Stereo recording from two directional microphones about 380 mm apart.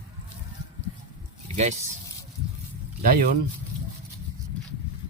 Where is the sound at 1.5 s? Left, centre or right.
Centre.